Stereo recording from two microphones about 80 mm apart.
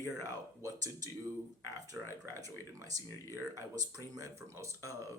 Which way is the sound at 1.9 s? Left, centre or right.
Right.